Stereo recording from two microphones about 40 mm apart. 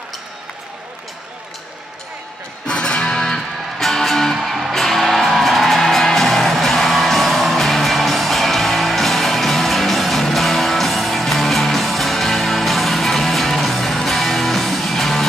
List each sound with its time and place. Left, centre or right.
2.6 s music: left
3.3 s music: centre
4.4 s music: centre
4.7 s music: centre